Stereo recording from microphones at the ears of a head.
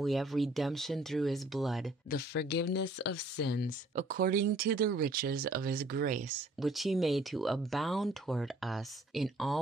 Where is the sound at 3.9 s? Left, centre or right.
Right.